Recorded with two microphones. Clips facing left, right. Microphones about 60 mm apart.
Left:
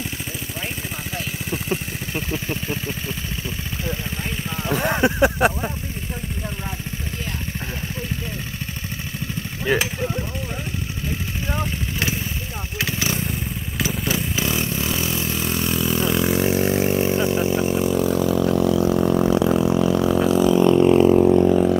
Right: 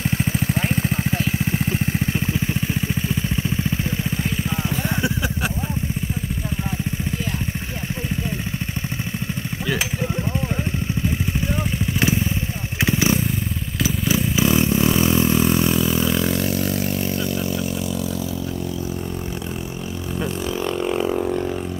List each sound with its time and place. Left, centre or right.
4.8 s a sound: left
12.8 s motorcycle: right
13.8 s vehicle: centre
15.0 s vehicle: right; by 16.3 s centre
16.3 s vehicle: left